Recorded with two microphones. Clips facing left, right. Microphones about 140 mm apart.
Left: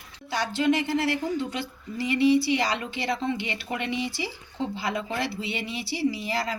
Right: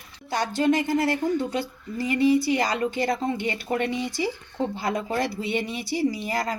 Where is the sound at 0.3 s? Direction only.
45° right (ahead or behind).